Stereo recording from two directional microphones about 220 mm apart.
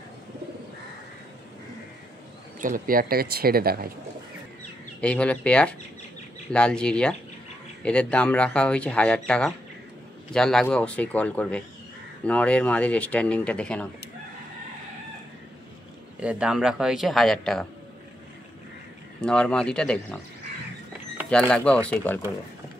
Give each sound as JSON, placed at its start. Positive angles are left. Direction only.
{"t": 2.6, "sound": "speech", "side_deg": -40}
{"t": 5.0, "sound": "speech", "side_deg": 5}
{"t": 16.2, "sound": "speech", "side_deg": -5}
{"t": 19.2, "sound": "speech", "side_deg": 5}
{"t": 21.3, "sound": "speech", "side_deg": 5}